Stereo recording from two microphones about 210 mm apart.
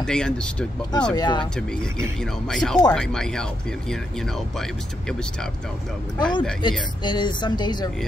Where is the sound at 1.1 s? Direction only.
20° left (ahead or behind).